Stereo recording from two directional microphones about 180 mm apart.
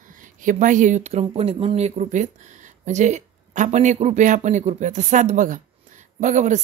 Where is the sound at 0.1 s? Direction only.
45° right (ahead or behind).